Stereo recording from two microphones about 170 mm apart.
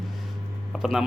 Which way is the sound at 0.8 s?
Centre (ahead or behind).